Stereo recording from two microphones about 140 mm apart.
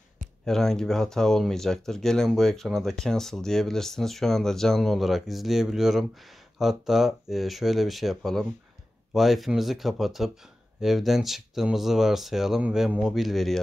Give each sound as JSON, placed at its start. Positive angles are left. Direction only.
{"t": 0.5, "sound": "speech", "side_deg": 5}